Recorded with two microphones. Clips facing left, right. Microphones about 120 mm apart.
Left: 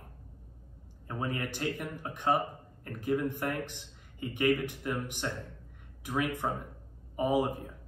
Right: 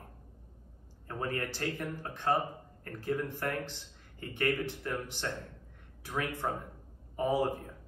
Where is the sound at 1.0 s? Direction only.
15° left (ahead or behind).